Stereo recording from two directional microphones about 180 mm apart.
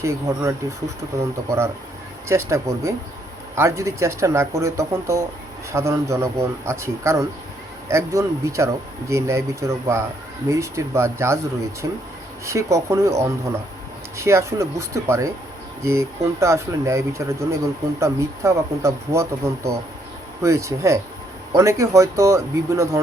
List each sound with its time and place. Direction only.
0.0 s speech: 15° right (ahead or behind)